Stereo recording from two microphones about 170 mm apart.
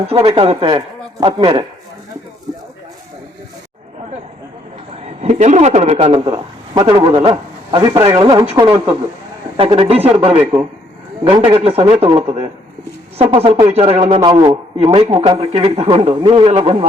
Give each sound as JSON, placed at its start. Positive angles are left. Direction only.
{"t": 0.1, "sound": "speech", "side_deg": -35}
{"t": 5.2, "sound": "a man's voice", "side_deg": -40}